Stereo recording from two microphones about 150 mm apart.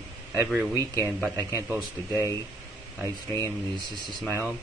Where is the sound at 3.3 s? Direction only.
25° right (ahead or behind).